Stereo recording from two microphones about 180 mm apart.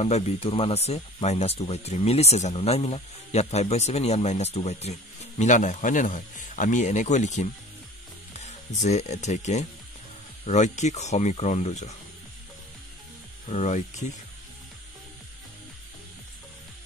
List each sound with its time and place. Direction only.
0.0 s speech: 35° left (ahead or behind)
13.5 s speech: 40° left (ahead or behind)